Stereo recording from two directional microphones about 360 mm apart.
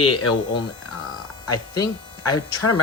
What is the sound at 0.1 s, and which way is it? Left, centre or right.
Speech, left.